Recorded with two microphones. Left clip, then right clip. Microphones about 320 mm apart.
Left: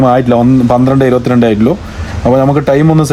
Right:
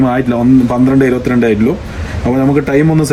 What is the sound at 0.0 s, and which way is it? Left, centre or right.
Speech, left.